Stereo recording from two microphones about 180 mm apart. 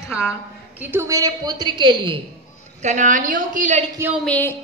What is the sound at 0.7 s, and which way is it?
A woman's voice, 10° right (ahead or behind).